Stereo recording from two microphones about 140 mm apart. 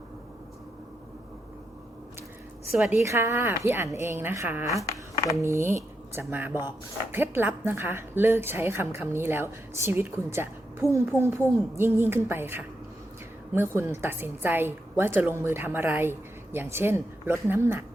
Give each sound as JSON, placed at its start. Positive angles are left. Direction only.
{"t": 2.7, "sound": "speech", "side_deg": -10}
{"t": 3.0, "sound": "speech", "side_deg": -20}